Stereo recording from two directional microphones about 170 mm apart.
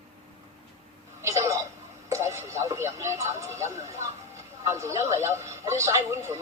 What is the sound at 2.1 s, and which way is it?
Speech, 15° right (ahead or behind).